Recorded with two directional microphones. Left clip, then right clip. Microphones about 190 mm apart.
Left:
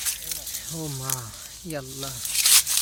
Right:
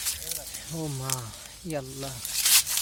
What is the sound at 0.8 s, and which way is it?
Speech, centre (ahead or behind).